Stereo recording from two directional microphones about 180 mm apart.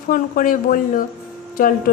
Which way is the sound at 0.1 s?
50° left (ahead or behind).